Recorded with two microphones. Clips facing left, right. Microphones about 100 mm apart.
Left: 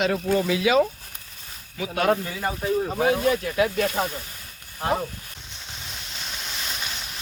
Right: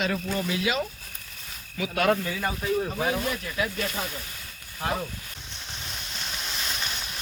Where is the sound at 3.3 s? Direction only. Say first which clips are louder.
Left 8 dB; 70° left (ahead or behind).